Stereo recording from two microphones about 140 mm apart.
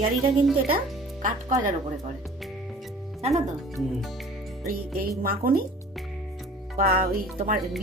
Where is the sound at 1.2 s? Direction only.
70° right (ahead or behind).